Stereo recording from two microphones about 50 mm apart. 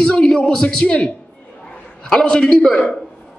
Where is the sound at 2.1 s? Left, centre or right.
Centre.